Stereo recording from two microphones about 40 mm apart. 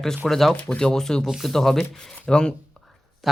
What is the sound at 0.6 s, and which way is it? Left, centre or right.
Speech, left.